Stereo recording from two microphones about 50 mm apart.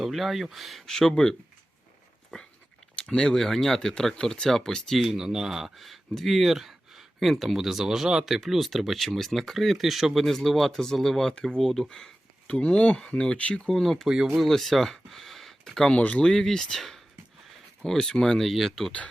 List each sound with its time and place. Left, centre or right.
0.0 s speech: centre
2.3 s dog: centre
3.0 s speech: centre
5.0 s speech: centre; by 13.6 s left
13.7 s speech: centre
14.1 s speech: centre
14.3 s speech: centre
15.9 s speech: centre